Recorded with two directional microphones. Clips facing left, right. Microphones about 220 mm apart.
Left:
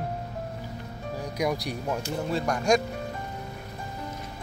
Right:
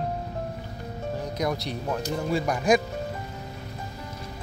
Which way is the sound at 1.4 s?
10° left (ahead or behind).